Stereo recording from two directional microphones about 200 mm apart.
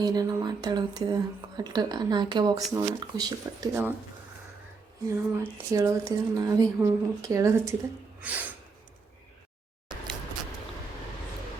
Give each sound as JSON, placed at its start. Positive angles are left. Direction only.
{"t": 0.0, "sound": "speech", "side_deg": -20}
{"t": 5.4, "sound": "speech", "side_deg": -15}